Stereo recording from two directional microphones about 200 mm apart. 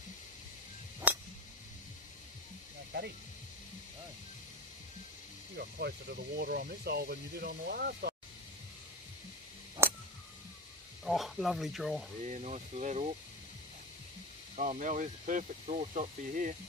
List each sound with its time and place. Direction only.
1.1 s a sound: 5° right (ahead or behind)
2.9 s music: 55° right (ahead or behind)
5.6 s speech: 55° right (ahead or behind)
11.1 s speech: centre (ahead or behind)
12.3 s speech: 35° right (ahead or behind)
14.6 s speech: 40° right (ahead or behind)